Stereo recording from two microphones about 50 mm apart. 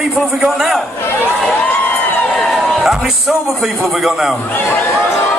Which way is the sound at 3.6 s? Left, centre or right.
Centre.